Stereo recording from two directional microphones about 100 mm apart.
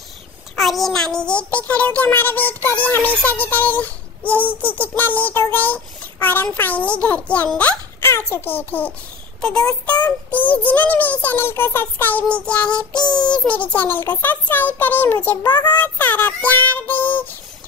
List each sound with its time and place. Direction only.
0.6 s a child's voice: centre (ahead or behind)
4.6 s child singing: 20° left (ahead or behind)
7.0 s a child's voice: 15° left (ahead or behind)
8.1 s child singing: 25° left (ahead or behind)
9.4 s a child's voice: 5° left (ahead or behind)
12.9 s child singing: 45° left (ahead or behind)
13.3 s a child's voice: 10° left (ahead or behind)
13.7 s child singing: 20° left (ahead or behind)